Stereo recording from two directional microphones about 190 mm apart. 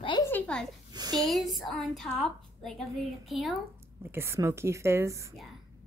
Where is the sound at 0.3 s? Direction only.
5° left (ahead or behind).